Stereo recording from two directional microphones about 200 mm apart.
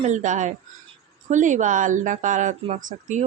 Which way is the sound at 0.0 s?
35° right (ahead or behind).